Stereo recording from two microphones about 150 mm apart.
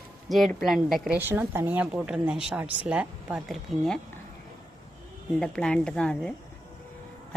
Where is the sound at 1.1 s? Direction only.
15° right (ahead or behind).